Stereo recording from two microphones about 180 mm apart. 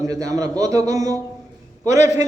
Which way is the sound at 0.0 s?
20° right (ahead or behind).